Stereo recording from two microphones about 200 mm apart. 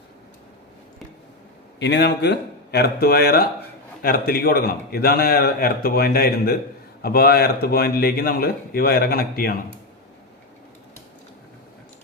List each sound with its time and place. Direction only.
1.8 s a man's voice: 60° left (ahead or behind)